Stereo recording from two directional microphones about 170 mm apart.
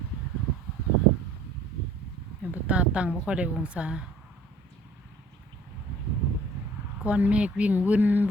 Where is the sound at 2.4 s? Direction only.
10° right (ahead or behind).